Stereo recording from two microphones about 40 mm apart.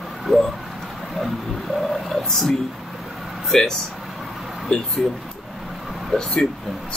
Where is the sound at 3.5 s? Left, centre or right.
Centre.